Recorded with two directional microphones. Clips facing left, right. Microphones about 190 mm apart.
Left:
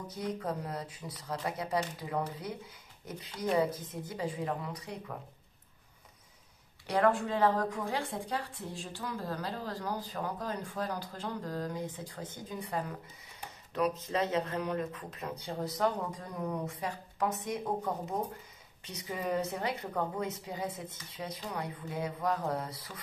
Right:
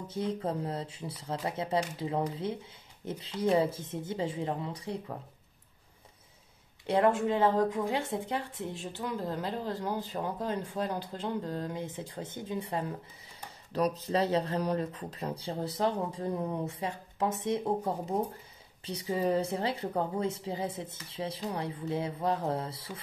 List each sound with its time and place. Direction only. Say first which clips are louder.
0.1 s a woman's voice: right 4 dB; 25° right (ahead or behind)
6.9 s a woman's voice: right 2 dB; 20° right (ahead or behind)
13.7 s a woman's voice: right 2 dB; 35° right (ahead or behind)